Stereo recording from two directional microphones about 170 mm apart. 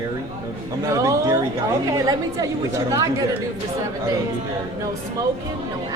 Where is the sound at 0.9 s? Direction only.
20° right (ahead or behind).